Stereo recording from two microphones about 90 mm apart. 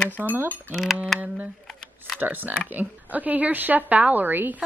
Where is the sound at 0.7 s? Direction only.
Centre (ahead or behind).